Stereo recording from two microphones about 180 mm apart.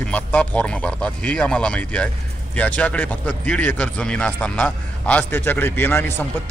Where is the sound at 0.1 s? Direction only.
10° left (ahead or behind).